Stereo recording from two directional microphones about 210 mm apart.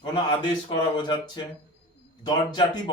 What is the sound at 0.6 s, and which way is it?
A man's voice, 20° left (ahead or behind).